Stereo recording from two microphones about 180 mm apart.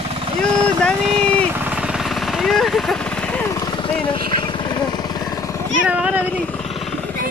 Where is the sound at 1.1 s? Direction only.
30° right (ahead or behind).